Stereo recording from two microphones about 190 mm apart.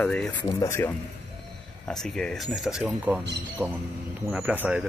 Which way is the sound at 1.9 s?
5° left (ahead or behind).